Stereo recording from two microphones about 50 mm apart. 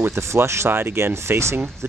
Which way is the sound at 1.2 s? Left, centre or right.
Right.